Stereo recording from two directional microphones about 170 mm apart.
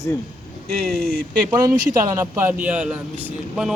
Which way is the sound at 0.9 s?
60° right (ahead or behind).